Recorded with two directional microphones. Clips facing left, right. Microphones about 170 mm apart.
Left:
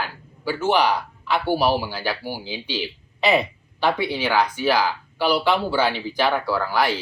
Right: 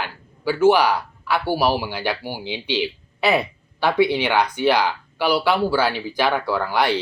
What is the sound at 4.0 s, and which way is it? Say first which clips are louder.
A man's voice: right 3 dB; 15° right (ahead or behind).